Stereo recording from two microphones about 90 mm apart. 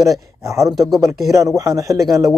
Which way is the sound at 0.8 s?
Centre (ahead or behind).